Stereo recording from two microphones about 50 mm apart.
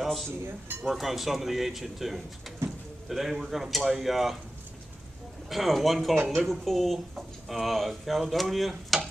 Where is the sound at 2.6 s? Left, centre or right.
Right.